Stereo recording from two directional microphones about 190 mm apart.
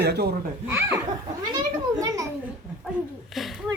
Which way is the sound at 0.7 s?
10° right (ahead or behind).